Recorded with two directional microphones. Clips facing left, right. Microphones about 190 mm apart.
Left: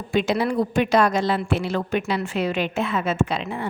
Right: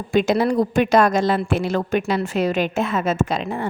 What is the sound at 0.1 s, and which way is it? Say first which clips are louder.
A woman's voice: right 4 dB; 45° right (ahead or behind).